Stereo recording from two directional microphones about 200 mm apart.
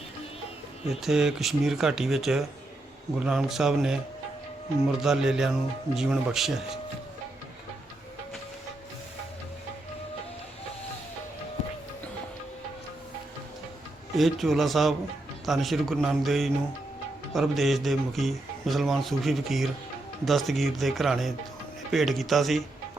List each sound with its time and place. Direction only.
0.9 s a man's voice: centre (ahead or behind)
14.2 s a man's voice: centre (ahead or behind)